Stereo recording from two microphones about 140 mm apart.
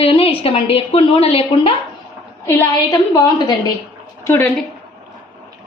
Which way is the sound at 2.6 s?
25° left (ahead or behind).